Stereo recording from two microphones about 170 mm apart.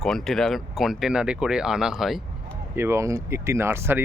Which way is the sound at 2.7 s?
15° right (ahead or behind).